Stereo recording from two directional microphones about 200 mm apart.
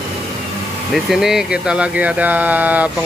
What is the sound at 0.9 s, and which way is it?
Speech, centre (ahead or behind).